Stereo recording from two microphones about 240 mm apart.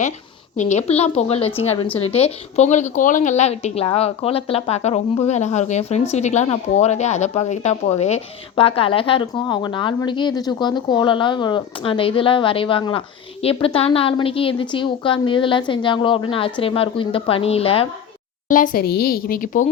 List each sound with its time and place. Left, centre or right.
0.5 s a woman's voice: left
18.4 s speech: left